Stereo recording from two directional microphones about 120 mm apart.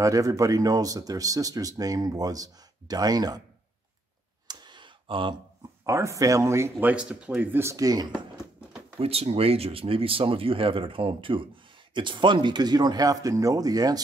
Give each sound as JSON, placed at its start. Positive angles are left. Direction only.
{"t": 0.0, "sound": "speech", "side_deg": -30}
{"t": 4.5, "sound": "a sound", "side_deg": -35}
{"t": 5.9, "sound": "speech", "side_deg": -25}
{"t": 7.6, "sound": "speech", "side_deg": -30}
{"t": 9.0, "sound": "speech", "side_deg": -55}